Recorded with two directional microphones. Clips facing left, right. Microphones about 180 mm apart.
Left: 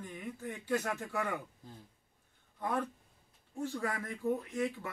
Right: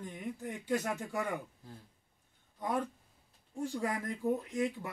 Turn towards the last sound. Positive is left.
turn(degrees=-15)  # may be behind; listen again after turning